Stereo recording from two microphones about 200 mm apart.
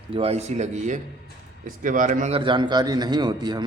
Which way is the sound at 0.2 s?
30° right (ahead or behind).